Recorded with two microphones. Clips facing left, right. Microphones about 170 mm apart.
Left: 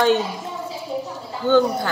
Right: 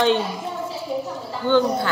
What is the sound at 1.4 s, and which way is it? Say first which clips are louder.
Speech: left 2 dB; 50° left (ahead or behind).